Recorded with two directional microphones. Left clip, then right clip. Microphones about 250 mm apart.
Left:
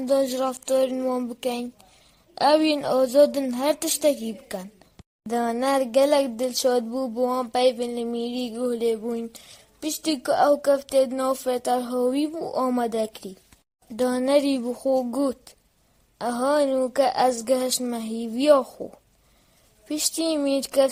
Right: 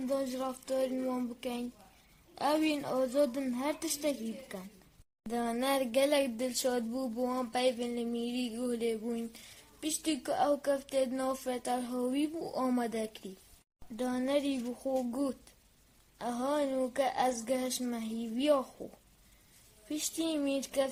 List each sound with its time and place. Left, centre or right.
0.1 s speech: left
5.3 s a sound: left
16.1 s speech: left
19.9 s speech: left